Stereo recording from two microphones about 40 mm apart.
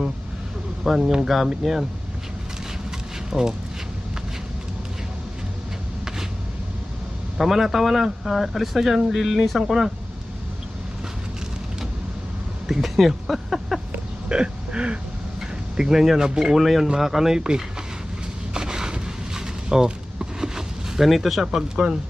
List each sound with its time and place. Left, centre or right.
0.9 s speech: centre
3.2 s speech: centre
7.3 s speech: centre
12.6 s speech: centre
14.3 s hiccup: right
15.4 s speech: centre
18.5 s a sound: centre
21.1 s speech: centre
21.5 s speech: centre